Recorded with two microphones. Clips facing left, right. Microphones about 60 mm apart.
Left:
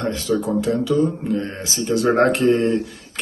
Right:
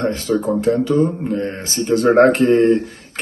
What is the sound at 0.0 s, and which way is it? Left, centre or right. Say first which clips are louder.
Speech: right 3 dB; right.